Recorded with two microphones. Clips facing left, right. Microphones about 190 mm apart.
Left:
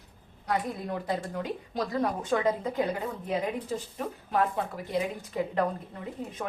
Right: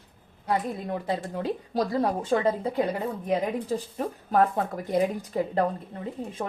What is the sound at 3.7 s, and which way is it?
Speech, 40° right (ahead or behind).